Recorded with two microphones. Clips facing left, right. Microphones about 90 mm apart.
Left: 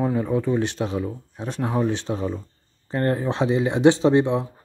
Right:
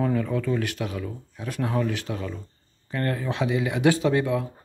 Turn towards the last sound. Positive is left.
turn(degrees=25)  # may be behind; listen again after turning